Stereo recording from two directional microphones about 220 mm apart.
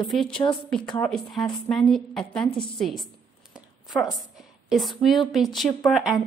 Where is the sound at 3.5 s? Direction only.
Centre (ahead or behind).